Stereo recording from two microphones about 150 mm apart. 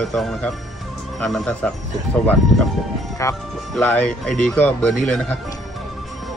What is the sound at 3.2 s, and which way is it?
Speech, 20° left (ahead or behind).